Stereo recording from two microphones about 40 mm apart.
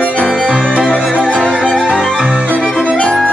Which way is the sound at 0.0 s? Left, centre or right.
Left.